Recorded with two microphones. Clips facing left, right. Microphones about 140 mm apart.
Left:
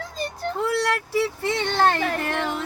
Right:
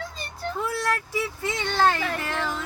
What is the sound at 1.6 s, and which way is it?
Speech, 25° left (ahead or behind).